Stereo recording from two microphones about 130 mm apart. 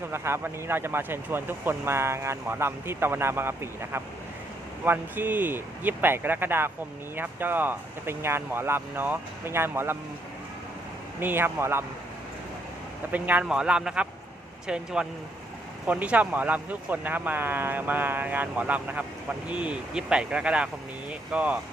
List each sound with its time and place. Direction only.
0.1 s speech: 20° right (ahead or behind)
11.2 s speech: 15° right (ahead or behind)
13.1 s speech: 15° right (ahead or behind)
15.9 s speech: 10° right (ahead or behind)